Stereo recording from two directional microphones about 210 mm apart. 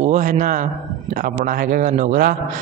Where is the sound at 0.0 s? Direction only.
35° right (ahead or behind).